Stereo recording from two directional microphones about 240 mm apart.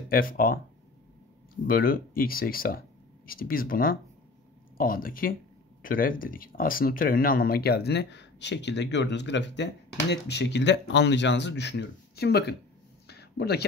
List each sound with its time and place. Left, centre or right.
0.1 s speech: left
1.7 s speech: left
13.0 s a sound: left